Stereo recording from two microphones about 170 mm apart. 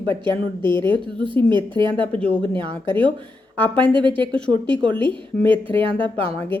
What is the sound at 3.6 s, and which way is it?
Speech, 10° left (ahead or behind).